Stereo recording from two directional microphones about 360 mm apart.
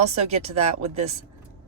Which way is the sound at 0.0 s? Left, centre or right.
Centre.